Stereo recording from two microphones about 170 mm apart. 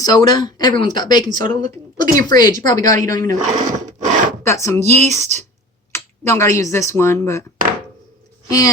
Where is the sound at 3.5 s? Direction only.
45° right (ahead or behind).